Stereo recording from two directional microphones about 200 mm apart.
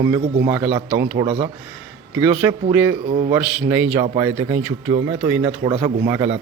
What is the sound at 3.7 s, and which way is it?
Speech, 10° right (ahead or behind).